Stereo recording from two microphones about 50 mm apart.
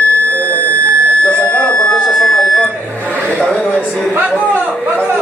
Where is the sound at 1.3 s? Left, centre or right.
Left.